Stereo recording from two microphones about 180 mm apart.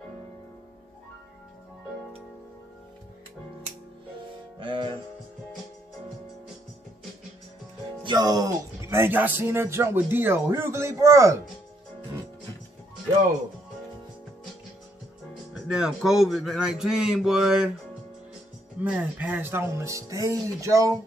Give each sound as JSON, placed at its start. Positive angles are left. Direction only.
{"t": 4.6, "sound": "music", "side_deg": -25}
{"t": 8.0, "sound": "speech", "side_deg": -25}
{"t": 15.5, "sound": "a man's voice", "side_deg": -5}
{"t": 18.8, "sound": "speech", "side_deg": -10}